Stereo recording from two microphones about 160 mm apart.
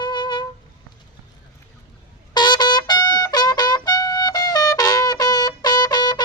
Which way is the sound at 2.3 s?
25° left (ahead or behind).